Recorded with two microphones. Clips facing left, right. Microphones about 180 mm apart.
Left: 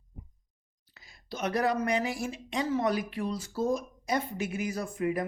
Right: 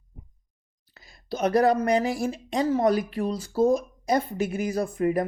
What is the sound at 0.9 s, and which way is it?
Speech, 40° right (ahead or behind).